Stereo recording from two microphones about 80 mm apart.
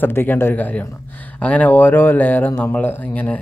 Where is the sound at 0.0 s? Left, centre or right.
Left.